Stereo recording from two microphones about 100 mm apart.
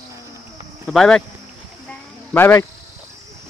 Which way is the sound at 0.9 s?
5° left (ahead or behind).